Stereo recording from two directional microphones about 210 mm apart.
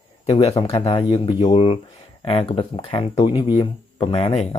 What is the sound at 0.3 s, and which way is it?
Speech, 30° left (ahead or behind).